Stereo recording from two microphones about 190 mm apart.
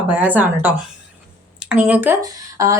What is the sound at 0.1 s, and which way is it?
Speech, 10° right (ahead or behind).